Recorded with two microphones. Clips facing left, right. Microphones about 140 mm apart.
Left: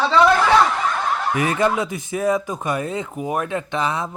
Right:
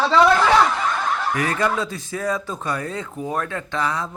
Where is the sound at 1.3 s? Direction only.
20° left (ahead or behind).